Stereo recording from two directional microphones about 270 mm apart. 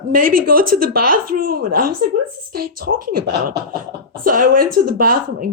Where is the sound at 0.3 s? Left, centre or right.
Right.